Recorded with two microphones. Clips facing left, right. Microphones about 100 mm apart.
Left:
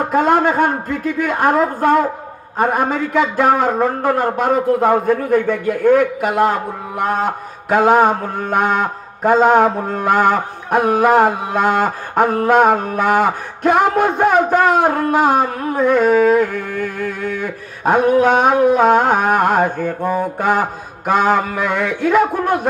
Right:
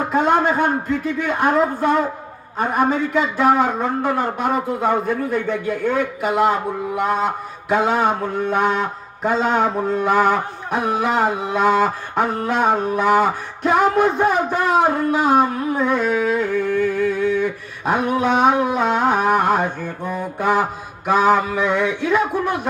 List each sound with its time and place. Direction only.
0.1 s a man's voice: 55° left (ahead or behind)